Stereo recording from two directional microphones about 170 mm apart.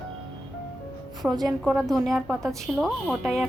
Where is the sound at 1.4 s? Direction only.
Centre (ahead or behind).